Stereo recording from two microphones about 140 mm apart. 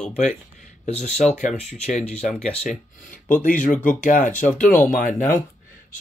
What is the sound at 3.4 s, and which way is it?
Speech, 70° left (ahead or behind).